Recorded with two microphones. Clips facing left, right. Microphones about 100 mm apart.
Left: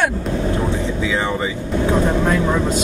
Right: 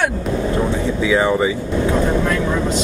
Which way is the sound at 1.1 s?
15° right (ahead or behind).